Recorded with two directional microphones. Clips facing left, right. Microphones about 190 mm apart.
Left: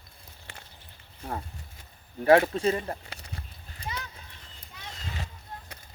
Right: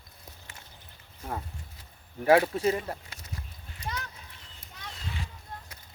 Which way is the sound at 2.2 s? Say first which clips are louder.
Left 2 dB; 10° right (ahead or behind).